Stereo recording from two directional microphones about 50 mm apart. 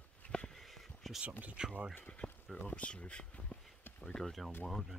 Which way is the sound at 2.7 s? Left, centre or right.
Left.